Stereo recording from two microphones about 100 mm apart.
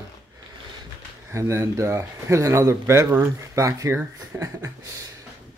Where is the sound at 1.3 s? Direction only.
30° right (ahead or behind).